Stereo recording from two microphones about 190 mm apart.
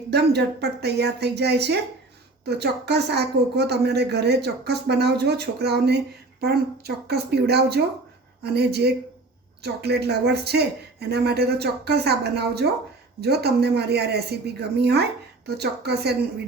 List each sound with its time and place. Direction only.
0.1 s a woman's voice: 60° right (ahead or behind)